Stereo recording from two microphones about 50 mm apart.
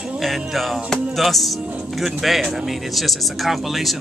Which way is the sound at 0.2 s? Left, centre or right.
Centre.